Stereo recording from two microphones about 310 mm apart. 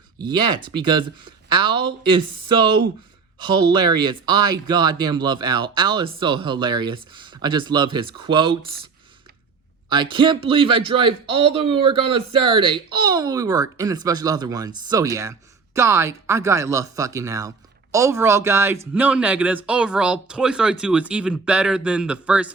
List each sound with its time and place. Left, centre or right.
0.2 s speech: centre
9.9 s speech: centre